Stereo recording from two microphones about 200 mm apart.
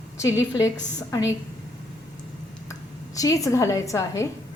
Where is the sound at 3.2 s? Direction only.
15° left (ahead or behind).